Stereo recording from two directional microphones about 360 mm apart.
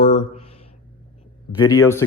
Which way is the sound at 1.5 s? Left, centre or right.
Centre.